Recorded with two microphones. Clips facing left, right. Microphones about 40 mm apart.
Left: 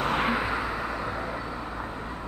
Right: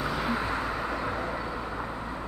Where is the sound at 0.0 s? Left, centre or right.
Left.